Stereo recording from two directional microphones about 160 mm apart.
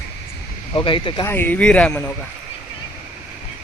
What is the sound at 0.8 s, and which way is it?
Speech, 30° left (ahead or behind).